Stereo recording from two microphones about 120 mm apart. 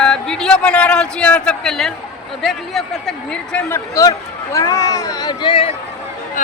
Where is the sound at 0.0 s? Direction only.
5° left (ahead or behind).